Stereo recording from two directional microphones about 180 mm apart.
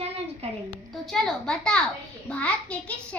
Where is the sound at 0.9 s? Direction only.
Centre (ahead or behind).